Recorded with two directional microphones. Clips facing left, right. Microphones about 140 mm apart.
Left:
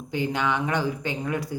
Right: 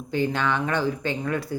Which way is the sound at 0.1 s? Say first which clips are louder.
Right 1 dB; 15° left (ahead or behind).